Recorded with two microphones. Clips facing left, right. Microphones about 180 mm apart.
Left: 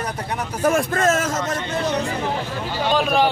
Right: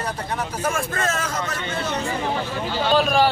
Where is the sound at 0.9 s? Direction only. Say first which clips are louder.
Left 6 dB; 45° left (ahead or behind).